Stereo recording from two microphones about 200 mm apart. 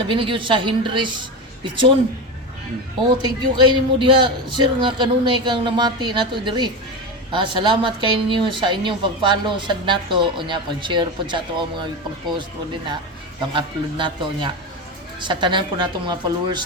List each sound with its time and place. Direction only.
0.1 s a woman's voice: 25° right (ahead or behind)
3.2 s a woman's voice: 20° right (ahead or behind)
13.5 s a woman's voice: 25° right (ahead or behind)